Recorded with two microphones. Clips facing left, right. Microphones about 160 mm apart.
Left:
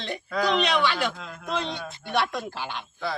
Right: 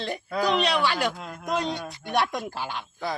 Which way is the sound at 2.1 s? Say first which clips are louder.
Right 1 dB; 45° right (ahead or behind).